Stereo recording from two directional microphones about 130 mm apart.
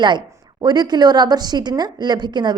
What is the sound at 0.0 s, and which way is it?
A woman's voice, 35° right (ahead or behind).